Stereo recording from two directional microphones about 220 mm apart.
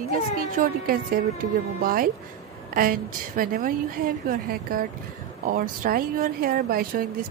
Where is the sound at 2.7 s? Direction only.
40° right (ahead or behind).